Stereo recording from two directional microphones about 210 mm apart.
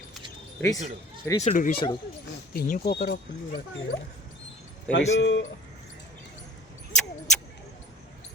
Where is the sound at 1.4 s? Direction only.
35° left (ahead or behind).